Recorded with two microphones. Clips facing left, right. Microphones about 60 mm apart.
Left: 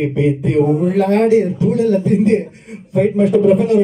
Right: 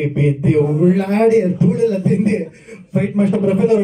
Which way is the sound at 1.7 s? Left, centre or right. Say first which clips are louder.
Left 2 dB; centre.